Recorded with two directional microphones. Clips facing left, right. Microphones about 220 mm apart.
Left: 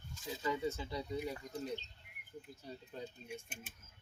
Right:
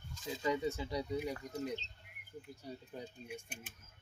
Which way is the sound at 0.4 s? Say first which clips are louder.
Right 2 dB; 15° right (ahead or behind).